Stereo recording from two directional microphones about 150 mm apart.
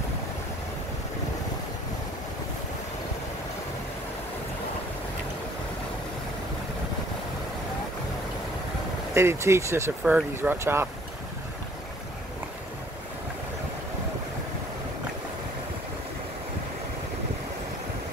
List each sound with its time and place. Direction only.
9.1 s speech: 20° right (ahead or behind)